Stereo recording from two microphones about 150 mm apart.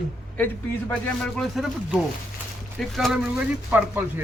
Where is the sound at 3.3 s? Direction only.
15° right (ahead or behind).